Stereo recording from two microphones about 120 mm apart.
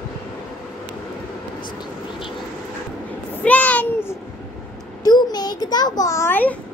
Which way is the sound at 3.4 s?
10° left (ahead or behind).